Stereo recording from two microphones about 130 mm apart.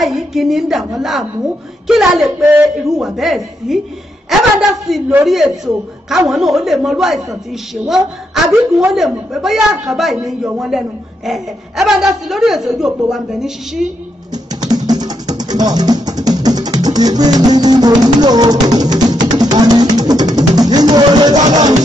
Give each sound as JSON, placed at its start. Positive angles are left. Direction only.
{"t": 0.0, "sound": "a woman's voice", "side_deg": 0}
{"t": 14.3, "sound": "music", "side_deg": -30}